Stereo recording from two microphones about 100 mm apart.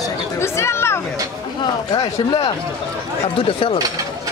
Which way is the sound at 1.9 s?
45° left (ahead or behind).